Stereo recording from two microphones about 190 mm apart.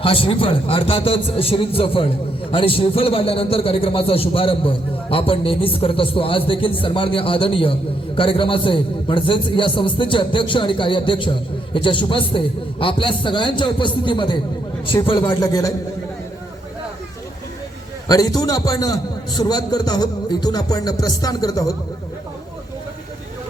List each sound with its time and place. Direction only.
0.0 s a man's voice: 30° left (ahead or behind)
18.1 s a man's voice: 20° left (ahead or behind)